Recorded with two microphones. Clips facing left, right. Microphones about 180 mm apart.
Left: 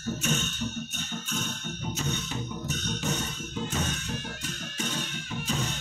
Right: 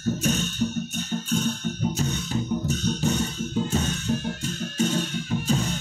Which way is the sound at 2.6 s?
30° right (ahead or behind).